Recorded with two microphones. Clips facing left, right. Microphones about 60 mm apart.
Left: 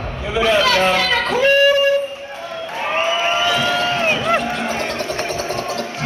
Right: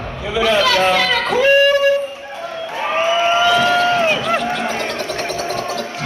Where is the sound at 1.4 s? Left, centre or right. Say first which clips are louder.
Right 1 dB; centre.